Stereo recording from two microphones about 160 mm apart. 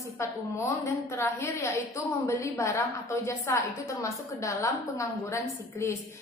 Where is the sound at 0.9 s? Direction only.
15° left (ahead or behind).